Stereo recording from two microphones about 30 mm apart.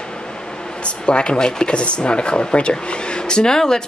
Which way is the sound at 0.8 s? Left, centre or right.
Left.